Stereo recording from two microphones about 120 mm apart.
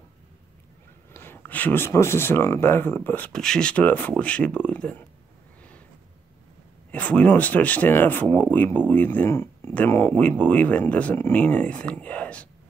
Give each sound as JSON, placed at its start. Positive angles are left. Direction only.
{"t": 1.1, "sound": "speech", "side_deg": 20}
{"t": 6.9, "sound": "speech", "side_deg": 10}